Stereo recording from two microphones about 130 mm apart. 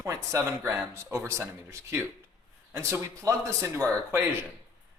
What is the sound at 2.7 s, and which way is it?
Speech, 25° right (ahead or behind).